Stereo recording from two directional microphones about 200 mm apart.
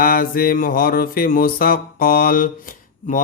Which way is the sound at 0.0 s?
45° left (ahead or behind).